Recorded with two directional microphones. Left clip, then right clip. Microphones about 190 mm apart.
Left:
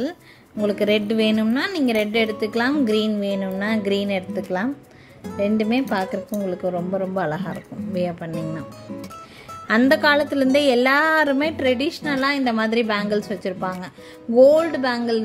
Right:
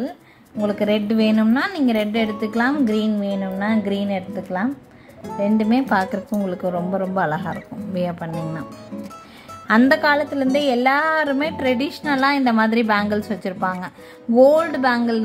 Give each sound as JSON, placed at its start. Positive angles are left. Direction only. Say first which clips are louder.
{"t": 0.7, "sound": "a woman's voice", "louder": "left 1 dB", "side_deg": 20}
{"t": 5.4, "sound": "a woman's voice", "louder": "right 1 dB", "side_deg": 15}
{"t": 6.4, "sound": "a woman's voice", "louder": "even", "side_deg": 5}
{"t": 8.3, "sound": "speech", "louder": "even", "side_deg": 0}
{"t": 9.7, "sound": "a woman's voice", "louder": "right 1 dB", "side_deg": 15}